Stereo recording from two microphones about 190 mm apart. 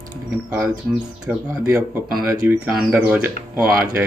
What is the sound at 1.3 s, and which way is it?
Speech, 5° right (ahead or behind).